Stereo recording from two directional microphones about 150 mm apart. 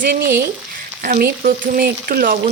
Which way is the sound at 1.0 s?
85° right.